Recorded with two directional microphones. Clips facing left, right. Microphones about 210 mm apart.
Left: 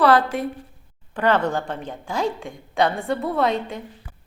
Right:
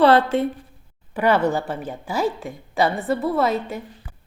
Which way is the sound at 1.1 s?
10° right (ahead or behind).